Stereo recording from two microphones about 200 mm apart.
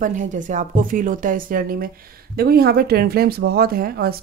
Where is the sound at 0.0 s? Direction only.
40° right (ahead or behind).